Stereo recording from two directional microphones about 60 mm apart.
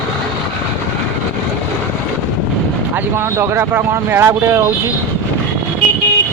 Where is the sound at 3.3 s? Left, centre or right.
Right.